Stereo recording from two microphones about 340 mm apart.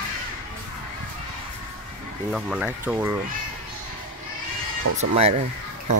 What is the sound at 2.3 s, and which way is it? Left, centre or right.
Speech, centre.